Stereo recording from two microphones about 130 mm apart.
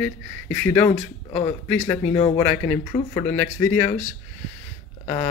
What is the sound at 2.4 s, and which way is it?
Speech, 15° left (ahead or behind).